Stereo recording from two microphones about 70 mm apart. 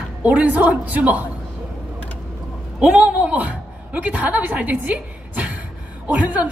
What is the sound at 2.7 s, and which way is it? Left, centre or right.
A woman's voice, centre.